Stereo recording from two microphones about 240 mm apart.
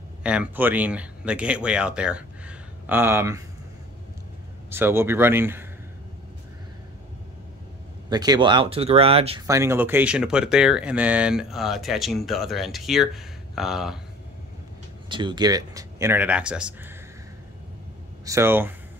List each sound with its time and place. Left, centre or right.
0.2 s speech: centre
4.6 s speech: centre
8.1 s speech: centre
9.5 s speech: centre
15.0 s speech: centre
18.2 s speech: centre